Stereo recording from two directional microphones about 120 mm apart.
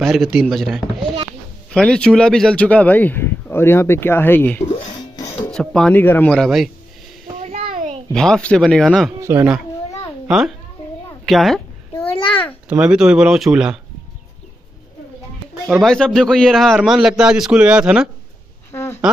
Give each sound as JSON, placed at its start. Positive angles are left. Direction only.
{"t": 0.0, "sound": "a man's voice", "side_deg": 0}
{"t": 4.9, "sound": "music", "side_deg": 35}
{"t": 5.5, "sound": "speech", "side_deg": 5}
{"t": 5.9, "sound": "speech", "side_deg": 15}
{"t": 6.3, "sound": "a man's voice", "side_deg": 0}
{"t": 7.4, "sound": "a sound", "side_deg": -65}
{"t": 8.1, "sound": "a man's voice", "side_deg": 5}
{"t": 9.2, "sound": "speech", "side_deg": -25}
{"t": 10.2, "sound": "a child's voice", "side_deg": -5}
{"t": 12.6, "sound": "speech", "side_deg": -10}
{"t": 15.6, "sound": "a man's voice", "side_deg": 0}
{"t": 18.7, "sound": "a sound", "side_deg": 20}